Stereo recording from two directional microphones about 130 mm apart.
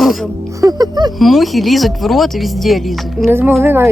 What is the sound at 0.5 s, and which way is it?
Music, 30° right (ahead or behind).